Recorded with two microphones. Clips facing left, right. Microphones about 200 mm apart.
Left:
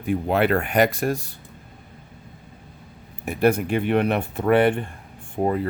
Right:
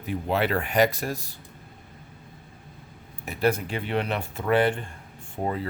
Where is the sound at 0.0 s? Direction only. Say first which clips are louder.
Left 5 dB; 55° left (ahead or behind).